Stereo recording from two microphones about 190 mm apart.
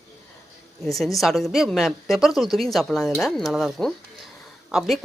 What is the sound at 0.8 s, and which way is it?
Speech, centre (ahead or behind).